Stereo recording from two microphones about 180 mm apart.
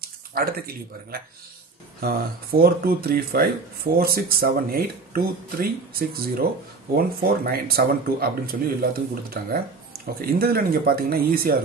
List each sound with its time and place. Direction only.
0.0 s speech: 55° right (ahead or behind)